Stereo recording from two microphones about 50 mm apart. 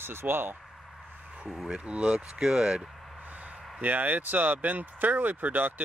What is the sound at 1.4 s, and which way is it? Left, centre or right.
Speech, centre.